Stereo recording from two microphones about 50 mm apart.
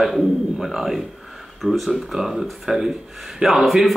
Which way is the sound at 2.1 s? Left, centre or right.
Centre.